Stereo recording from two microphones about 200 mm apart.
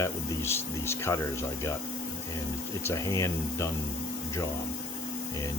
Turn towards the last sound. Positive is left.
turn(degrees=15)  # may be behind; listen again after turning